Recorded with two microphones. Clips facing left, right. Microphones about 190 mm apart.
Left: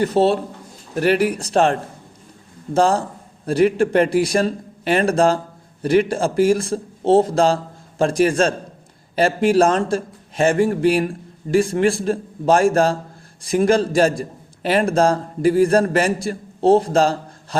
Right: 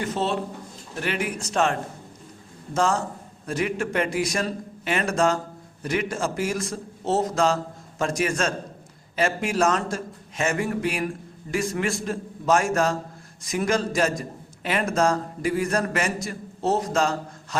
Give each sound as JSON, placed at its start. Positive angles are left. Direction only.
{"t": 0.0, "sound": "a man's voice", "side_deg": 35}
{"t": 2.7, "sound": "a man's voice", "side_deg": 35}